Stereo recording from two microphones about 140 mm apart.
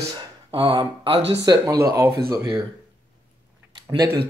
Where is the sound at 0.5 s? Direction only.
40° right (ahead or behind).